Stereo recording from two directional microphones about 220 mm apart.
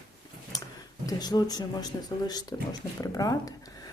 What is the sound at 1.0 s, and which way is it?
Speech, 20° left (ahead or behind).